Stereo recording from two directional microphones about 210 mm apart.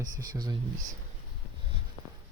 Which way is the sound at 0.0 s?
20° right (ahead or behind).